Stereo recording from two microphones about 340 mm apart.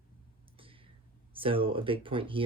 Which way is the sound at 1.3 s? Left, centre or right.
Centre.